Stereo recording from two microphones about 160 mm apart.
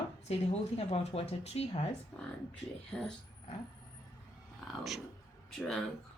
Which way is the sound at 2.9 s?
5° left (ahead or behind).